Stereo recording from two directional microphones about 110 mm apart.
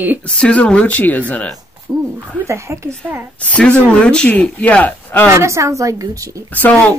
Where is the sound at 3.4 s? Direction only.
10° left (ahead or behind).